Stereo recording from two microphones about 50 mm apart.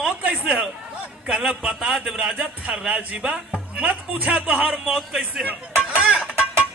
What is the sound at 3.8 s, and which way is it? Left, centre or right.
Speech, right.